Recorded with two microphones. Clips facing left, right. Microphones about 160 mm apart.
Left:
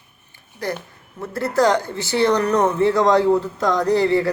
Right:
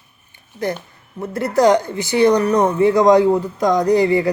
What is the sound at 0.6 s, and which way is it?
A woman's voice, 20° right (ahead or behind).